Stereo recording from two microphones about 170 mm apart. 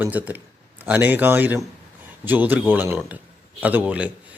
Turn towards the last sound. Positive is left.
turn(degrees=-10)  # may be behind; listen again after turning